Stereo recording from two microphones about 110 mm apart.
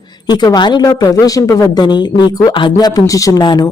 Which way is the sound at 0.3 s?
40° left (ahead or behind).